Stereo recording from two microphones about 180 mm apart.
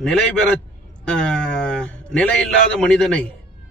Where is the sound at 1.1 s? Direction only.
5° left (ahead or behind).